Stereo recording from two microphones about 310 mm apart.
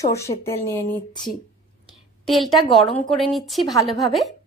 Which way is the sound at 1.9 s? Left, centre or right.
Centre.